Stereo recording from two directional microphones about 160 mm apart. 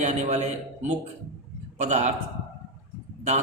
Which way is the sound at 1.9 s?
45° right (ahead or behind).